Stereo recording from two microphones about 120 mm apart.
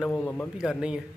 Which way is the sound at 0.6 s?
5° right (ahead or behind).